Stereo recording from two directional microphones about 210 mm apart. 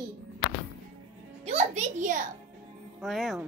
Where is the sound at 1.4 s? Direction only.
30° right (ahead or behind).